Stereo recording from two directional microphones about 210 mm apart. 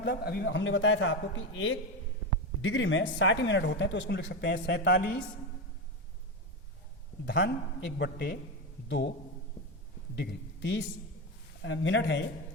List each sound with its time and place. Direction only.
0.0 s a woman's voice: 45° left (ahead or behind)
7.3 s a man's voice: 55° left (ahead or behind)
10.2 s a man's voice: 55° left (ahead or behind)